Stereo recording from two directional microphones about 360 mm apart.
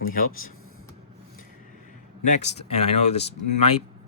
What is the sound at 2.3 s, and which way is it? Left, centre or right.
Speech, centre.